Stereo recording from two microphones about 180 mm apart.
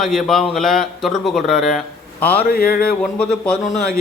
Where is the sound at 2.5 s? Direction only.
55° left (ahead or behind).